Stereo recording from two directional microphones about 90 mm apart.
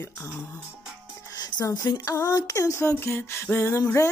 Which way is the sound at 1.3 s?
50° left (ahead or behind).